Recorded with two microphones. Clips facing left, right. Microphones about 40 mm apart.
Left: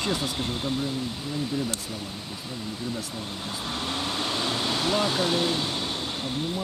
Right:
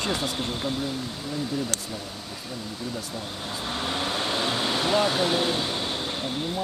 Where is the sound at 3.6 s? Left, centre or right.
Centre.